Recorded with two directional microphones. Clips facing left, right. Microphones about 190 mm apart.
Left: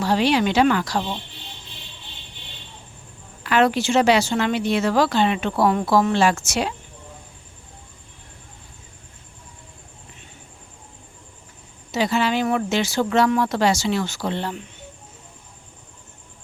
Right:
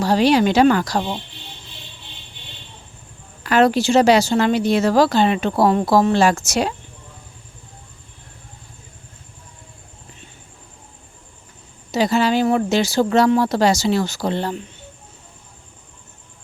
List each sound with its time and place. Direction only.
0.0 s a woman's voice: 40° right (ahead or behind)
3.4 s a woman's voice: 40° right (ahead or behind)
11.9 s a woman's voice: 40° right (ahead or behind)